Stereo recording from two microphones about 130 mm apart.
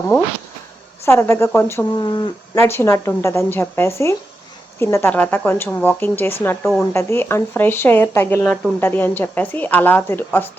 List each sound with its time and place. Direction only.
1.0 s a woman's voice: 20° left (ahead or behind)
1.9 s speech: 35° left (ahead or behind)
2.6 s a woman's voice: 20° left (ahead or behind)